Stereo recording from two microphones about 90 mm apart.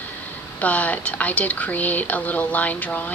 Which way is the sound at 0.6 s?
15° left (ahead or behind).